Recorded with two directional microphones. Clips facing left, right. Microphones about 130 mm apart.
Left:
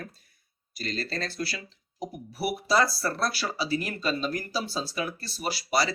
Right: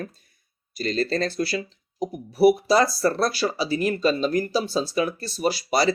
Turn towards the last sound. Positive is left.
turn(degrees=-20)  # may be behind; listen again after turning